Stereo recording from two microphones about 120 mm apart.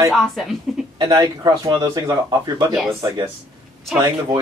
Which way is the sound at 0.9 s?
35° right (ahead or behind).